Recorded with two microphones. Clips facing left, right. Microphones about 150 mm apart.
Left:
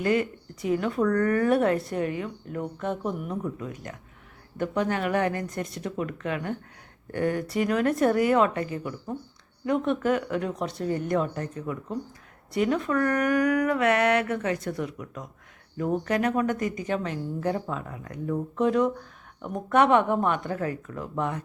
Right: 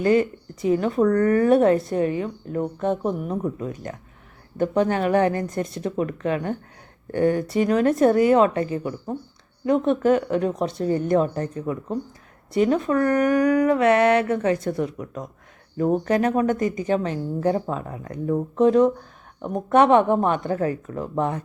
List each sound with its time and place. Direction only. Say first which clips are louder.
0.0 s a woman's voice: right 6 dB; 30° right (ahead or behind)